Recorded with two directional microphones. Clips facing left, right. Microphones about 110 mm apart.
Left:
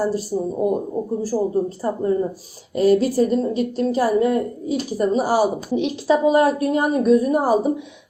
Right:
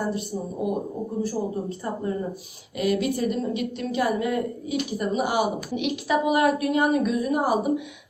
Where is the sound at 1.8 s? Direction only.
30° left (ahead or behind).